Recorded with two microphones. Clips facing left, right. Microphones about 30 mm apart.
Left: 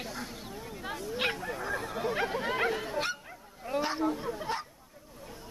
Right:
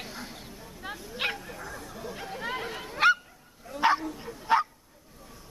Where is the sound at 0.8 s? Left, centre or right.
Centre.